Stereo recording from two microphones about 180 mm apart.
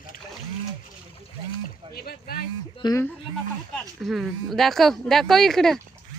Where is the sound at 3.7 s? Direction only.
Centre (ahead or behind).